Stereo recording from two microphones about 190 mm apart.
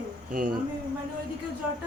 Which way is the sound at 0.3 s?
45° right (ahead or behind).